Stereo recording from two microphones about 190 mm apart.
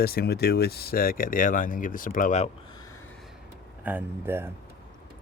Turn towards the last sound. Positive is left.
turn(degrees=-10)  # may be behind; listen again after turning